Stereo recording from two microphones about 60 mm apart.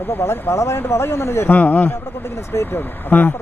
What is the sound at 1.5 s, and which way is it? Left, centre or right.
Speech, left.